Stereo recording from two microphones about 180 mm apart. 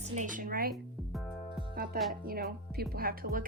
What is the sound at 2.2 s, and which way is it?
Speech, 55° right (ahead or behind).